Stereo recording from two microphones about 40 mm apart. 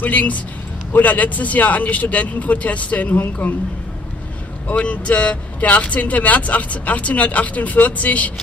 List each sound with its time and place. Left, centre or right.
0.0 s speech: left
4.6 s speech: left